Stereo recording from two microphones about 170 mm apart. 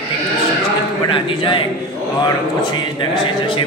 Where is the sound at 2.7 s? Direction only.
30° left (ahead or behind).